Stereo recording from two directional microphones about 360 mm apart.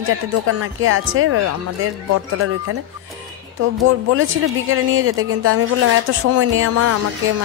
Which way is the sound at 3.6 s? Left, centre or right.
Right.